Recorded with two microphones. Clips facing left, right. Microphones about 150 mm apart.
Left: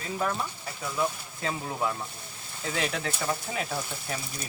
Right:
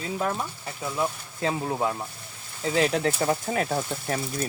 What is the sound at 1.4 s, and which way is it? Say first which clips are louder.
Speech: right 4 dB; 30° right (ahead or behind).